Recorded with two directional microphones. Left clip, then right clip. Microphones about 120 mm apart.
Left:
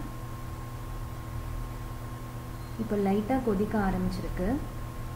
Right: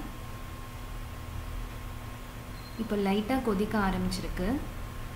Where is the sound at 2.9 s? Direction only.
15° right (ahead or behind).